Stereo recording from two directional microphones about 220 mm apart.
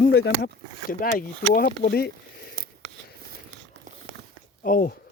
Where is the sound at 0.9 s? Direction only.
40° left (ahead or behind).